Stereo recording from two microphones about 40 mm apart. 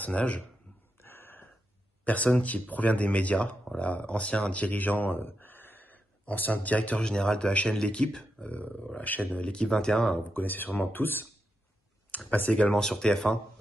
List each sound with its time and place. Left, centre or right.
0.0 s a man's voice: left
1.0 s a sound: left
2.0 s a man's voice: left
7.0 s a man's voice: left
9.4 s speech: left
10.3 s speech: left
12.1 s a sound: left
12.7 s speech: centre